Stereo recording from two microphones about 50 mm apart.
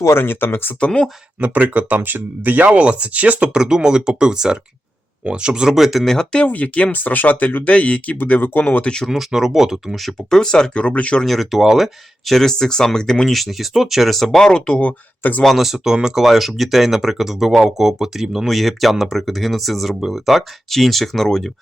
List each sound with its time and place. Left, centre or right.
0.0 s speech: left
0.8 s speech: left
1.4 s speech: right
3.5 s speech: centre
6.4 s speech: left
9.0 s speech: centre
10.8 s speech: left
11.2 s speech: centre
14.8 s speech: left
15.4 s speech: centre